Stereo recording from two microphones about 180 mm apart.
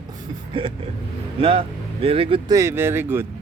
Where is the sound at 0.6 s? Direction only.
30° right (ahead or behind).